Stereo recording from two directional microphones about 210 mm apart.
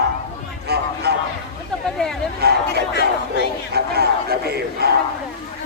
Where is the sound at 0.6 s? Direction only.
50° right (ahead or behind).